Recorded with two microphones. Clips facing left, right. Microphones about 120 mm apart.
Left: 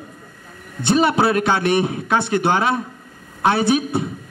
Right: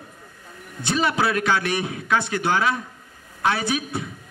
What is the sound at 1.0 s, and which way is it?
A man's voice, 30° left (ahead or behind).